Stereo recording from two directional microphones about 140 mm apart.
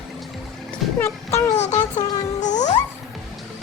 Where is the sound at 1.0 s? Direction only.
20° left (ahead or behind).